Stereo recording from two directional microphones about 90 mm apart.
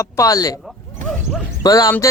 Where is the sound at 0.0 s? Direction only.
40° left (ahead or behind).